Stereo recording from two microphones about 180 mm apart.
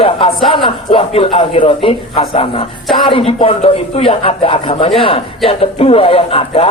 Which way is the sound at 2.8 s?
Centre (ahead or behind).